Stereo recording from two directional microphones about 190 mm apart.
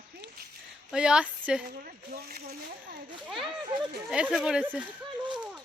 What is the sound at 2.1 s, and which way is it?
Speech, 55° right (ahead or behind).